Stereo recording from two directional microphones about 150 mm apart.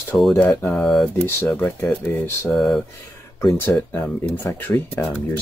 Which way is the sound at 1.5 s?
15° left (ahead or behind).